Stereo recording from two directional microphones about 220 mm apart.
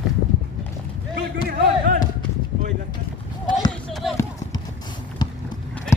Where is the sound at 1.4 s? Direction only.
35° right (ahead or behind).